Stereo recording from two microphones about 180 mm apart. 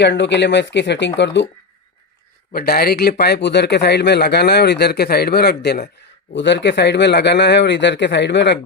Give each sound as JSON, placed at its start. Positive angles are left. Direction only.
{"t": 0.0, "sound": "speech", "side_deg": 75}
{"t": 2.5, "sound": "speech", "side_deg": 60}
{"t": 6.3, "sound": "speech", "side_deg": 80}